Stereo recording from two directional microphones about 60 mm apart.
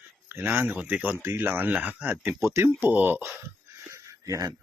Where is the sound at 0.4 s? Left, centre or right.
Right.